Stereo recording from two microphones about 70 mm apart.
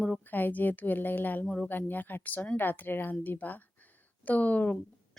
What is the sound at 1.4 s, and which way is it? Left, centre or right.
Speech, centre.